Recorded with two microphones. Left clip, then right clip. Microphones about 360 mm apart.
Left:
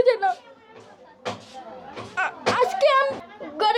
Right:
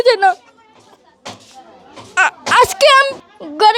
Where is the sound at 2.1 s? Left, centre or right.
Right.